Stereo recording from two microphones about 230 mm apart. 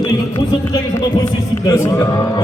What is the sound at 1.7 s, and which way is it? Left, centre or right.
Speech, centre.